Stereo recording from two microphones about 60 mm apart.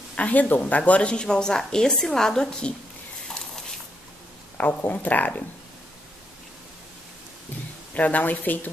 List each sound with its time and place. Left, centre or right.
0.1 s speech: left; by 2.7 s centre
3.3 s a sound: centre
4.6 s speech: left
7.9 s speech: left